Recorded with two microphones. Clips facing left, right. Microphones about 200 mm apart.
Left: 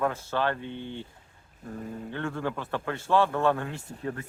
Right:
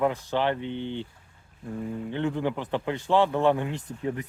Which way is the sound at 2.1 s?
15° right (ahead or behind).